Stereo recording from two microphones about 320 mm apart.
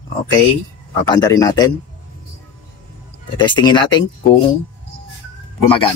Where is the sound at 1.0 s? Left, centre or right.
Centre.